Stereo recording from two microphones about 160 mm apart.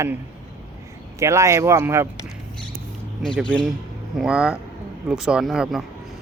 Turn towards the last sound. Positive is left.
turn(degrees=-5)  # may be behind; listen again after turning